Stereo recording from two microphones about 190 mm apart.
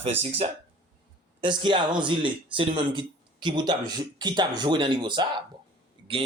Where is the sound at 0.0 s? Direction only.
30° right (ahead or behind).